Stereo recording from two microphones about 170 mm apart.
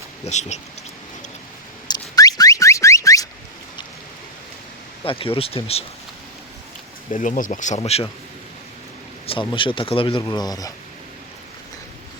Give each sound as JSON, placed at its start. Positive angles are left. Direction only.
{"t": 0.3, "sound": "speech", "side_deg": 40}
{"t": 2.1, "sound": "car alarm", "side_deg": 20}
{"t": 5.0, "sound": "speech", "side_deg": 35}
{"t": 7.1, "sound": "speech", "side_deg": 50}
{"t": 9.2, "sound": "speech", "side_deg": 30}